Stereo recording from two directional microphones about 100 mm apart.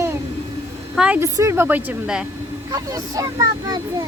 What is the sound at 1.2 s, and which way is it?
Speech, 30° right (ahead or behind).